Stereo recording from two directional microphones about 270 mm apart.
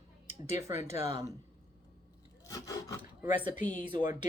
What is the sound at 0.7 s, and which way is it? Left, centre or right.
Speech, left.